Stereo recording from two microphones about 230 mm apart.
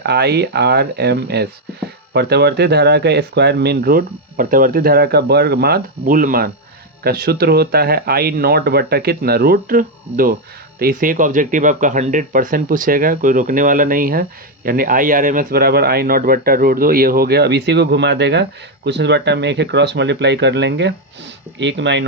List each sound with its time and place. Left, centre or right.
0.0 s speech: right